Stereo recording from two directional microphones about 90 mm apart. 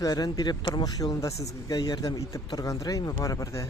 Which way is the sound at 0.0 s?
45° left (ahead or behind).